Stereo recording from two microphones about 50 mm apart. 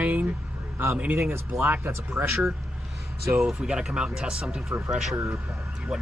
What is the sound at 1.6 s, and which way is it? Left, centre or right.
Speech, right.